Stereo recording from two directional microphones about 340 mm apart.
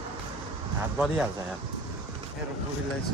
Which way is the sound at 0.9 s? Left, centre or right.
Centre.